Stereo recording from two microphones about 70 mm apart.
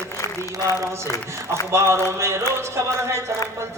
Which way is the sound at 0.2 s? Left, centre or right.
Left.